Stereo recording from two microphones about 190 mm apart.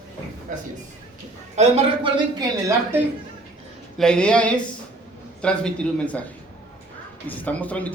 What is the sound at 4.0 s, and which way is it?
A man's voice, 5° left (ahead or behind).